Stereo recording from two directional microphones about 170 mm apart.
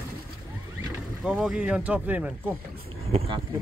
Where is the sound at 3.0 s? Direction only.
35° right (ahead or behind).